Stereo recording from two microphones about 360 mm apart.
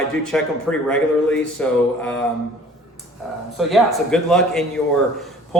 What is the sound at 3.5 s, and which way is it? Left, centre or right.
A man's voice, centre.